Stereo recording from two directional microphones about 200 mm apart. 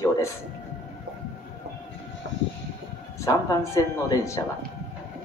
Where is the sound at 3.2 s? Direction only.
15° left (ahead or behind).